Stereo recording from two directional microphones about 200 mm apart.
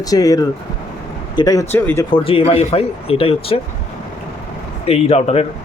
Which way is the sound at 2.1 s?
30° left (ahead or behind).